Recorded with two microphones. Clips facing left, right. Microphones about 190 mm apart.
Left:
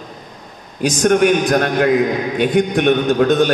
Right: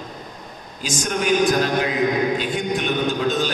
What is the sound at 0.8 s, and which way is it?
A man's voice, 60° left (ahead or behind).